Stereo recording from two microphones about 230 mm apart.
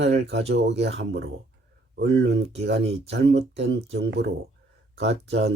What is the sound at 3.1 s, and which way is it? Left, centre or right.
Speech, right.